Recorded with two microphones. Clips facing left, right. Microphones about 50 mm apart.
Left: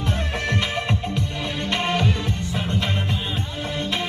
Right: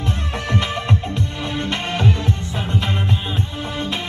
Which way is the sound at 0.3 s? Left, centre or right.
Centre.